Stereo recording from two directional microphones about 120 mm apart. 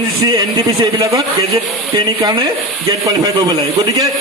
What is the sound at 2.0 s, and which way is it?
Speech, 35° right (ahead or behind).